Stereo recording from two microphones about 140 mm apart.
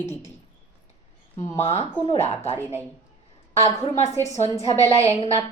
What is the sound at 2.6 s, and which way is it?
Speech, 15° right (ahead or behind).